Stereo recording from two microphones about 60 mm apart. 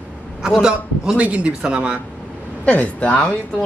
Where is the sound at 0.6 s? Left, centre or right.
Centre.